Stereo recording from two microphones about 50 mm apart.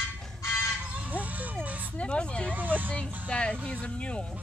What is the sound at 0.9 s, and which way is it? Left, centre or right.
Music, right.